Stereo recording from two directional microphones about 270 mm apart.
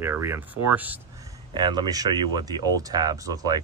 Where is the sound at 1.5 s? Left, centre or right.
Centre.